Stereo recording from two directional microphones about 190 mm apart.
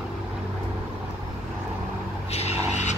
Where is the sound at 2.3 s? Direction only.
35° left (ahead or behind).